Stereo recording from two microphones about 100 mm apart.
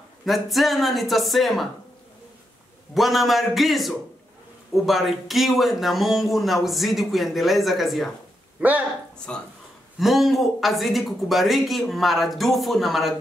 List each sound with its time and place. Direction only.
0.2 s speech: centre (ahead or behind)
2.9 s speech: centre (ahead or behind)
8.5 s speech: 15° right (ahead or behind)
9.3 s speech: 10° left (ahead or behind)
9.9 s speech: centre (ahead or behind)